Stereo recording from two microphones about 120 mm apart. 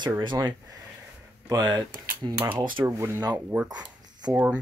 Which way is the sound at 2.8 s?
20° right (ahead or behind).